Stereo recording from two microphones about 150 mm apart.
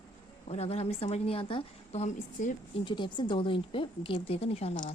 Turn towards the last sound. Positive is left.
turn(degrees=45)  # may be behind; listen again after turning